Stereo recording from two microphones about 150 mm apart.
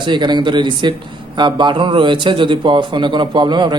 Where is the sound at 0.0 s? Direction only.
30° right (ahead or behind).